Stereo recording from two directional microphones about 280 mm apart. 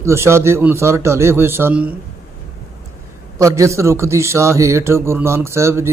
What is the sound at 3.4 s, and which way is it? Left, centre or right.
A man's voice, centre.